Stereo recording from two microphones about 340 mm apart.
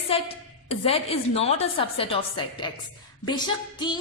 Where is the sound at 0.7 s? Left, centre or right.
Centre.